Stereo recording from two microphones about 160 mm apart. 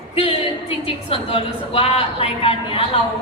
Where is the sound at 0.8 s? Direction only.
35° left (ahead or behind).